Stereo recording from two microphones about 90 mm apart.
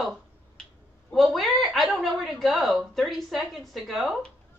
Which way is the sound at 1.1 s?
Centre (ahead or behind).